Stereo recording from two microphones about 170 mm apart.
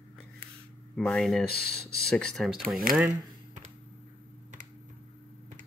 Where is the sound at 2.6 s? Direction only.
60° right (ahead or behind).